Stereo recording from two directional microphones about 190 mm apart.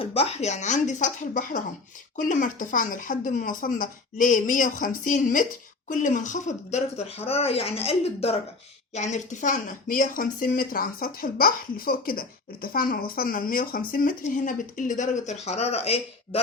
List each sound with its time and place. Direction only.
0.0 s speech: 30° left (ahead or behind)